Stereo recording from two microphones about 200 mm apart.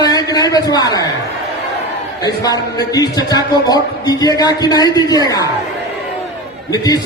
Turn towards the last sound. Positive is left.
turn(degrees=20)  # may be behind; listen again after turning